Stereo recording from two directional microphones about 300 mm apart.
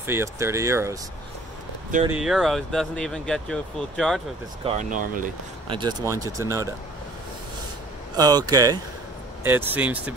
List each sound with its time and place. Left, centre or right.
0.0 s speech: centre
2.0 s speech: centre
4.6 s speech: right
5.8 s speech: centre
8.2 s speech: centre